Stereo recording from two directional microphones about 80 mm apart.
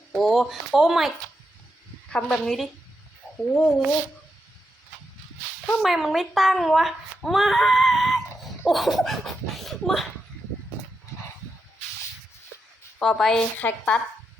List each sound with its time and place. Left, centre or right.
0.1 s speech: centre
2.0 s speech: centre
5.8 s speech: centre
13.0 s speech: centre
13.6 s a woman's voice: centre